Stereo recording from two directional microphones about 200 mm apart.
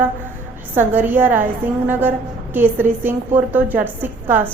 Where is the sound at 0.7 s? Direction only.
10° right (ahead or behind).